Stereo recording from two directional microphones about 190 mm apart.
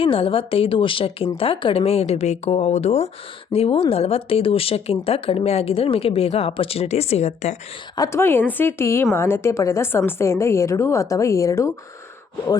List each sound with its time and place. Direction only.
0.0 s a woman's voice: 30° left (ahead or behind)
7.9 s a woman's voice: 15° left (ahead or behind)